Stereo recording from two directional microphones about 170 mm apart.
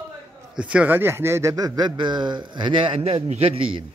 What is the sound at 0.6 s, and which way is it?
A man's voice, 5° right (ahead or behind).